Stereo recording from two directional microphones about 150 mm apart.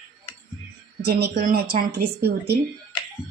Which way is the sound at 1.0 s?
90° right.